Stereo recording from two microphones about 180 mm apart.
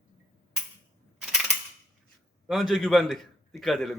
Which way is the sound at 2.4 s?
Centre (ahead or behind).